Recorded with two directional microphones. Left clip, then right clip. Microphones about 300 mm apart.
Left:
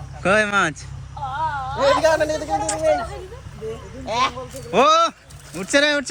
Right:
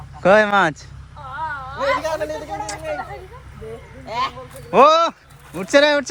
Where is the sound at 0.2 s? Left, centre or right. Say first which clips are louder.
Right 4 dB; centre.